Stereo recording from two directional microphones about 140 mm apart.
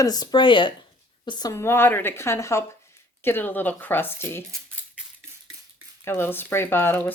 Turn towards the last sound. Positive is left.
turn(degrees=15)  # may be behind; listen again after turning